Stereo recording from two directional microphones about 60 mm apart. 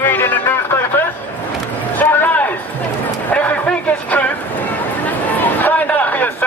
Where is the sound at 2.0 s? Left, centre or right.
Left.